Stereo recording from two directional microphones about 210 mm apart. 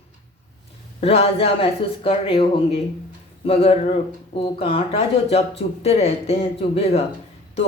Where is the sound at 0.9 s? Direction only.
30° left (ahead or behind).